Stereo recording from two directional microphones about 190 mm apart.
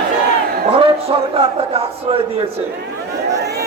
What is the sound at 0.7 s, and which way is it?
A man's voice, 30° right (ahead or behind).